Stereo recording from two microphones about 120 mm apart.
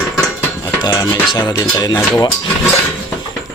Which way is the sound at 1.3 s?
40° left (ahead or behind).